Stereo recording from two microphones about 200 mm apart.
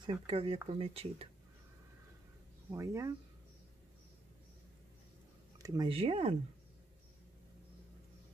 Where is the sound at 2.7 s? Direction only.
15° right (ahead or behind).